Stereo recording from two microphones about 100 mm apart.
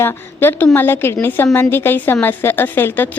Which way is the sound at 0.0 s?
25° left (ahead or behind).